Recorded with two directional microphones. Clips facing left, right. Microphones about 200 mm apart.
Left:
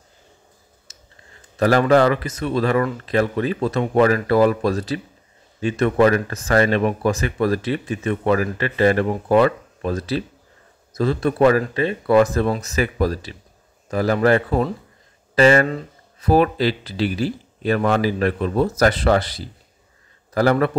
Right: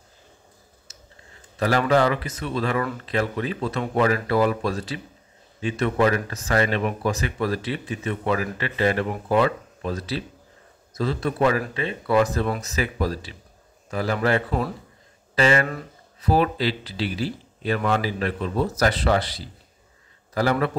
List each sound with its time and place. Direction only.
1.6 s speech: 45° left (ahead or behind)